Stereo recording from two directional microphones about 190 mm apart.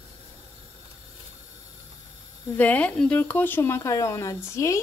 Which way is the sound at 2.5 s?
10° left (ahead or behind).